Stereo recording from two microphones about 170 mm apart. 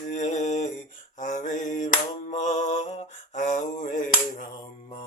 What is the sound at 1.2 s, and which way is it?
Mantra, 45° left (ahead or behind).